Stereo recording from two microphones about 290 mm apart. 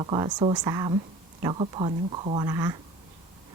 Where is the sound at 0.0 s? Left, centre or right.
Centre.